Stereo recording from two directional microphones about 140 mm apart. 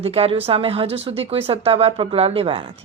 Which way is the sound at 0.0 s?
45° right (ahead or behind).